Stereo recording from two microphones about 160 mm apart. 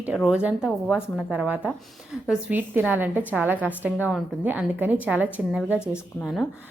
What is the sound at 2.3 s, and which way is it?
A woman's voice, 10° right (ahead or behind).